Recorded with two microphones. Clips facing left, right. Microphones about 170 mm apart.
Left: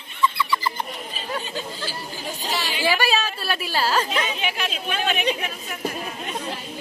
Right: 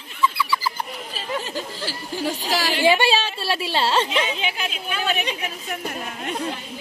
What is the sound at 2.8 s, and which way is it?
A woman's voice, 25° right (ahead or behind).